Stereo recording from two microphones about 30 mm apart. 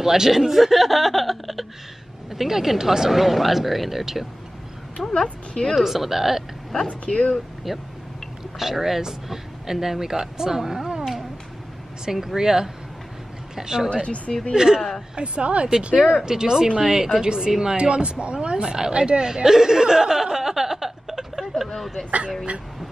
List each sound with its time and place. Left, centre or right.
0.0 s speech: centre
4.9 s a sound: left
5.5 s a woman's voice: left
5.8 s speech: centre
7.1 s speech: left
7.7 s speech: centre
12.0 s speech: centre
14.0 s speech: left
14.5 s speech: right
15.1 s speech: right
15.9 s speech: centre
17.7 s speech: right
19.2 s a sound: centre
21.7 s speech: centre